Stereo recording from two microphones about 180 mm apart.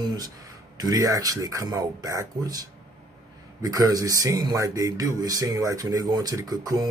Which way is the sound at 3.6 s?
20° right (ahead or behind).